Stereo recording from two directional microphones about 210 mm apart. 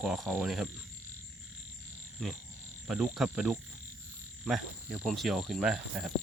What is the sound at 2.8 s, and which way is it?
Cricket, 5° right (ahead or behind).